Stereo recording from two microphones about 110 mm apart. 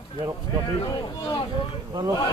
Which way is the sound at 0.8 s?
40° left (ahead or behind).